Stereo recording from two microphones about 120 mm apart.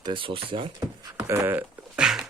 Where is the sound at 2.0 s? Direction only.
5° right (ahead or behind).